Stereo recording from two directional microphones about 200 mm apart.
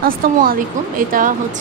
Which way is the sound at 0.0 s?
45° right (ahead or behind).